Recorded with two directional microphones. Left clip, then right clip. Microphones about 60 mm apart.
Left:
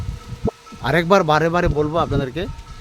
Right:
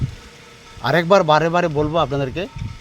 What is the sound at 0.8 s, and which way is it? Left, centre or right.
Speech, left.